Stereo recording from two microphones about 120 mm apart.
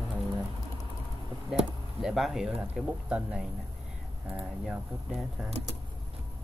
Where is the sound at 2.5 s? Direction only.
15° right (ahead or behind).